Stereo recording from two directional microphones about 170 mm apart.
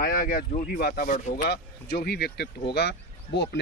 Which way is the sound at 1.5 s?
70° left (ahead or behind).